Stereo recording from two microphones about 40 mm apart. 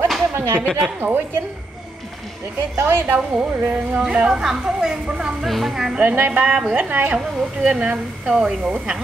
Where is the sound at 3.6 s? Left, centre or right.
Right.